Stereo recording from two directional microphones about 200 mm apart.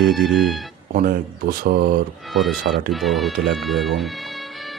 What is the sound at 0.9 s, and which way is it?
Speech, 45° right (ahead or behind).